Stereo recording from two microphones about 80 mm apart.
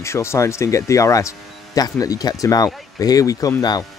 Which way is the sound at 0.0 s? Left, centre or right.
Left.